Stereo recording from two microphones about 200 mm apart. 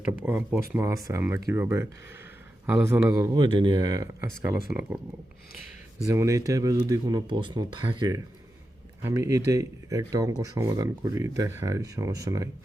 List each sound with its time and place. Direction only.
0.0 s speech: 5° right (ahead or behind)
6.1 s speech: 15° right (ahead or behind)